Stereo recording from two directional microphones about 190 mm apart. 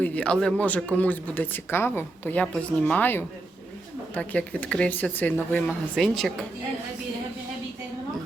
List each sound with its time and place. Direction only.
0.0 s speech: 5° left (ahead or behind)